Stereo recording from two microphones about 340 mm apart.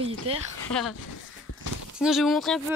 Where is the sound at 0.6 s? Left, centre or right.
Centre.